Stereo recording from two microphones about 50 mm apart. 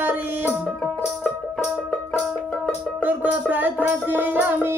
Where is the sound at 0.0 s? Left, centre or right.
Right.